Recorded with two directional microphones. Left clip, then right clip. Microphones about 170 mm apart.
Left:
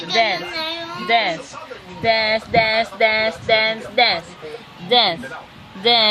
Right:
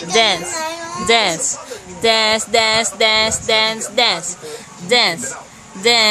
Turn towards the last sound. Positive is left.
turn(degrees=-10)  # may be behind; listen again after turning